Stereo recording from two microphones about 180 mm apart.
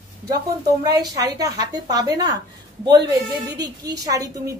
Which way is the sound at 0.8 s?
20° right (ahead or behind).